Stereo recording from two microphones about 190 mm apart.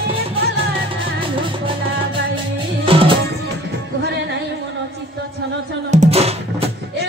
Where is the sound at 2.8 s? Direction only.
30° right (ahead or behind).